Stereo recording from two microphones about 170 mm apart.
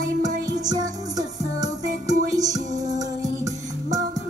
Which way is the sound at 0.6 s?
20° right (ahead or behind).